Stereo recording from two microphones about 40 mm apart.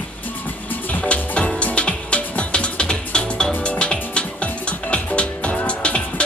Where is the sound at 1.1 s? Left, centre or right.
Left.